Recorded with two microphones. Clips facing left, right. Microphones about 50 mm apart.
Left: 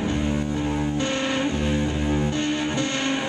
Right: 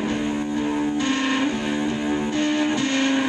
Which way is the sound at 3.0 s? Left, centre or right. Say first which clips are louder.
Right 4 dB; centre.